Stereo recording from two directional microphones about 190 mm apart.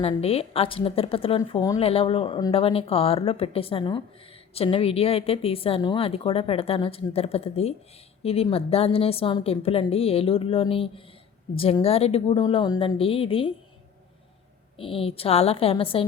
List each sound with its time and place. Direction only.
0.0 s a woman's voice: 30° left (ahead or behind)
14.8 s a woman's voice: 30° left (ahead or behind)